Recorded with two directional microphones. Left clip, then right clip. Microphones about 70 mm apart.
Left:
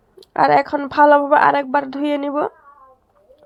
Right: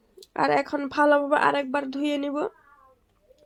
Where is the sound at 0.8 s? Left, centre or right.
Left.